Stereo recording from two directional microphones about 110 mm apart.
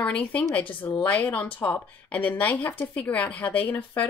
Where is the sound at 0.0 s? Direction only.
10° left (ahead or behind).